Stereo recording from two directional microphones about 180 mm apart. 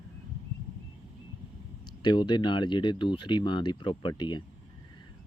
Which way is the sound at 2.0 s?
25° left (ahead or behind).